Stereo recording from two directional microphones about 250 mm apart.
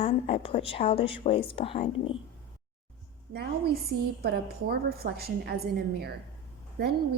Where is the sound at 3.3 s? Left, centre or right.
Right.